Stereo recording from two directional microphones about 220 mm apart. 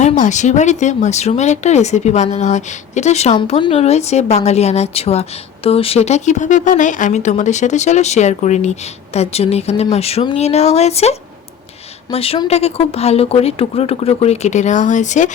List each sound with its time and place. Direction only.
0.0 s speech: 35° left (ahead or behind)